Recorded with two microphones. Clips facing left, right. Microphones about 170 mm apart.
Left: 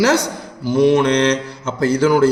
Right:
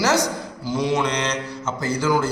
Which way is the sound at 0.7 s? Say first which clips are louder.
Left 9 dB; 55° left (ahead or behind).